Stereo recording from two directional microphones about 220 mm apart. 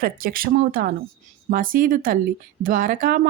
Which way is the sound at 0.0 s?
40° right (ahead or behind).